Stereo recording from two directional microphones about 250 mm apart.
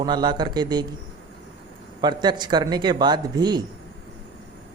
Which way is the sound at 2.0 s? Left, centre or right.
Centre.